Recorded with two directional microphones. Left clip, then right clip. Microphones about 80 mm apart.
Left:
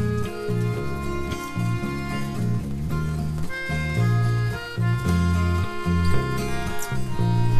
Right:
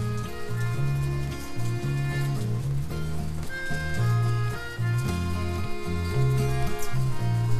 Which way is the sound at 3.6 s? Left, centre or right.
Left.